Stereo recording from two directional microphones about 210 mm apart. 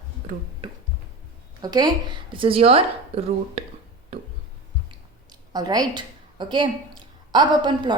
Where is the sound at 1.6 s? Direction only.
20° right (ahead or behind).